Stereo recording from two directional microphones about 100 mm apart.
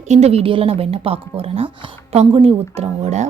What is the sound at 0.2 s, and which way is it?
Speech, 90° right.